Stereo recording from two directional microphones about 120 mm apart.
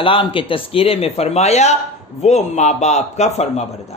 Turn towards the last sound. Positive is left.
turn(degrees=65)  # may be behind; listen again after turning